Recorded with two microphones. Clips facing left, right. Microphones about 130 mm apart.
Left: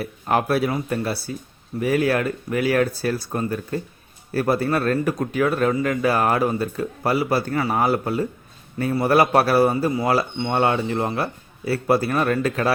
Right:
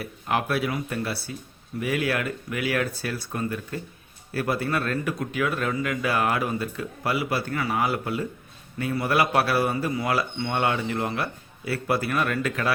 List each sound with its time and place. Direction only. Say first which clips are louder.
0.0 s speech: left 5 dB; 40° left (ahead or behind)